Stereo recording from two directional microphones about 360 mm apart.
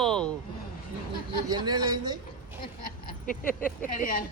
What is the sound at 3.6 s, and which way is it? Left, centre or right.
Speech, left.